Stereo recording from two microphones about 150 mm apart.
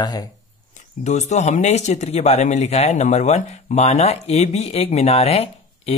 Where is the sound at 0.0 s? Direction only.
25° left (ahead or behind).